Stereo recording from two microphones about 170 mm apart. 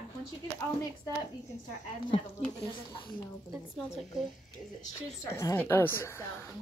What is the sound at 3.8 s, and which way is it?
Speech, centre (ahead or behind).